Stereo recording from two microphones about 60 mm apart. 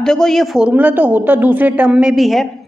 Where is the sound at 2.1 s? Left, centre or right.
Centre.